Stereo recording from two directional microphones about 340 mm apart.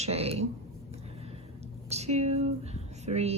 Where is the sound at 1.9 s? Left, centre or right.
Centre.